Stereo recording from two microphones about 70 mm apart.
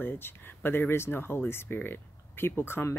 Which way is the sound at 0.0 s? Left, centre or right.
Left.